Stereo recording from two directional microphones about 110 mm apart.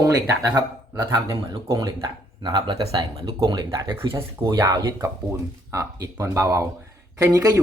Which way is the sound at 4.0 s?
55° right (ahead or behind).